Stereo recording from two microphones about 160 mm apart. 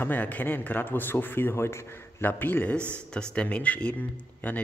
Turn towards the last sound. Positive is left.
turn(degrees=10)  # may be behind; listen again after turning